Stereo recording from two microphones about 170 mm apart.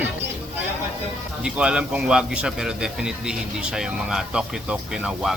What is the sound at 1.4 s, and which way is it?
A man's voice, 5° right (ahead or behind).